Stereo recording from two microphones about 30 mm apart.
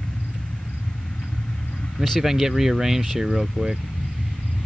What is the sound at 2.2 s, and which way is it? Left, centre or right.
Speech, centre.